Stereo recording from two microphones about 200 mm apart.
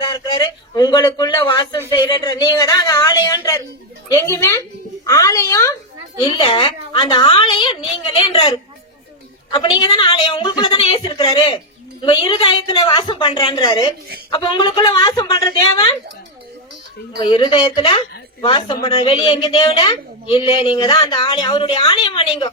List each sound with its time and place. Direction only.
0.0 s a man's voice: 20° left (ahead or behind)
17.2 s a woman's voice: 25° left (ahead or behind)